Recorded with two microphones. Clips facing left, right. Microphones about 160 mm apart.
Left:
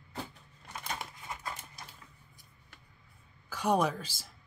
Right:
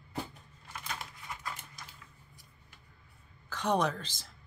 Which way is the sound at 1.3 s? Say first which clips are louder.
Right 1 dB; 30° left (ahead or behind).